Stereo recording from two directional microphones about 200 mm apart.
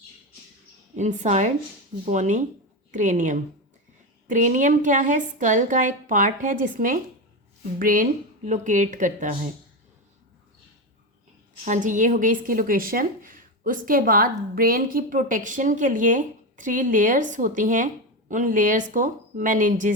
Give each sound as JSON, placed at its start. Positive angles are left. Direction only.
{"t": 0.9, "sound": "a woman's voice", "side_deg": -35}
{"t": 11.6, "sound": "a woman's voice", "side_deg": -40}